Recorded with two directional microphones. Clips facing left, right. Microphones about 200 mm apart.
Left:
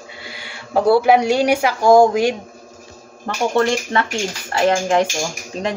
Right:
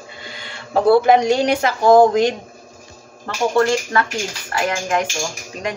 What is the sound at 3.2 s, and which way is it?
A woman's voice, 20° left (ahead or behind).